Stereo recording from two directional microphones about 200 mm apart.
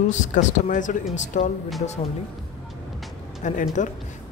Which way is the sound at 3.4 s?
40° left (ahead or behind).